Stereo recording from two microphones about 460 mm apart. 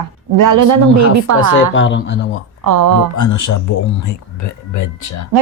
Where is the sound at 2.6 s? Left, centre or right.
Right.